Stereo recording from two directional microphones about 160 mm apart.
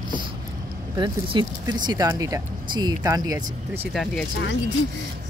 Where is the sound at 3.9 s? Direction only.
5° left (ahead or behind).